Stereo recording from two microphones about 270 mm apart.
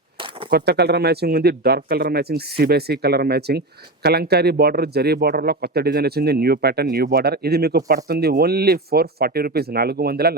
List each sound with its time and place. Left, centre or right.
0.5 s speech: right